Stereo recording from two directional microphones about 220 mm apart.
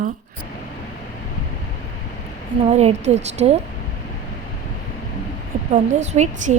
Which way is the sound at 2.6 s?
30° right (ahead or behind).